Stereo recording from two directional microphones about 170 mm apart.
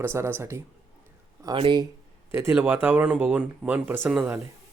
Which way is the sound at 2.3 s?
15° right (ahead or behind).